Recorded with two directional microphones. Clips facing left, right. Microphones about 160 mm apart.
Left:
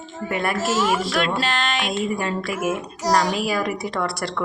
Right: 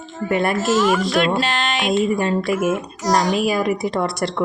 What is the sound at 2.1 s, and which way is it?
Speech, 25° right (ahead or behind).